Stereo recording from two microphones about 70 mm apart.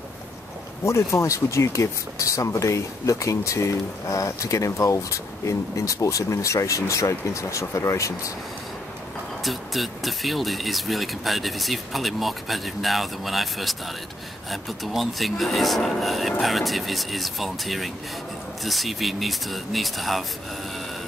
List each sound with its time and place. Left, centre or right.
0.8 s speech: left
9.4 s speech: centre